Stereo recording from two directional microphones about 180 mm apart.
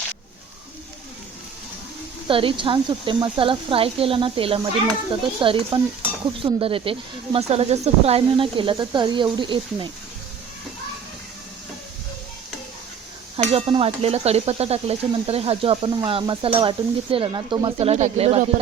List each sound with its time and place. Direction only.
2.2 s speech: 30° right (ahead or behind)
13.3 s speech: 30° right (ahead or behind)